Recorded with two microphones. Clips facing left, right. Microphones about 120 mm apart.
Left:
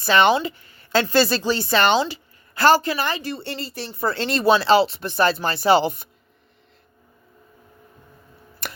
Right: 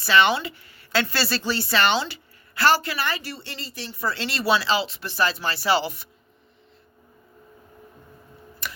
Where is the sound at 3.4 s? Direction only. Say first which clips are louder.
Left 6 dB; 50° left (ahead or behind).